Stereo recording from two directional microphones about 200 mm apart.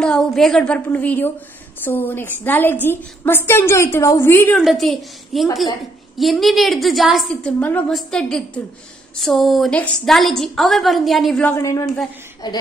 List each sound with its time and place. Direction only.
0.0 s a woman's voice: 5° left (ahead or behind)
4.6 s a woman's voice: centre (ahead or behind)
11.5 s a woman's voice: 15° left (ahead or behind)